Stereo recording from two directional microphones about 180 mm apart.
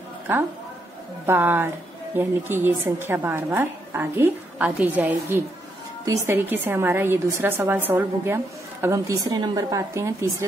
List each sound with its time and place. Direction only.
1.2 s a woman's voice: 10° right (ahead or behind)